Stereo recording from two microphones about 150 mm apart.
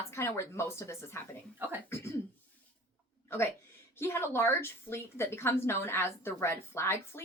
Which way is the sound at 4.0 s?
15° left (ahead or behind).